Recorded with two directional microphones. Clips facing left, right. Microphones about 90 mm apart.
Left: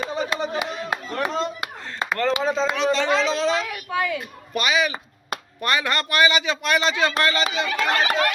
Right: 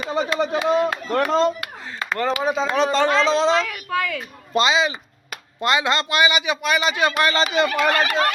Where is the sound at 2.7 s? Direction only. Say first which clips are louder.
Right 3 dB; 45° right (ahead or behind); by 6.9 s 5° right (ahead or behind).